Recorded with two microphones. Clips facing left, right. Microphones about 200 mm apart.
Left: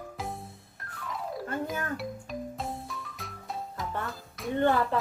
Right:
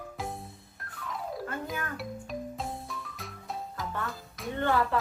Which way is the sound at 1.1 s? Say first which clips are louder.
Left 1 dB; centre (ahead or behind).